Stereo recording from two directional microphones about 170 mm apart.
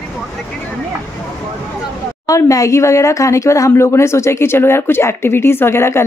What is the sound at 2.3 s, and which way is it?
Speech, 20° left (ahead or behind).